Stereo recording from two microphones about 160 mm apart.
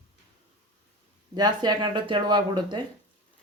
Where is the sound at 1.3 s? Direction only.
25° right (ahead or behind).